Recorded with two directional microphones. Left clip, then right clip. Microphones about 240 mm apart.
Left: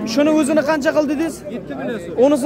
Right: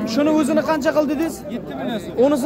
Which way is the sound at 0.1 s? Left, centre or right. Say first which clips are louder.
Left 3 dB; centre.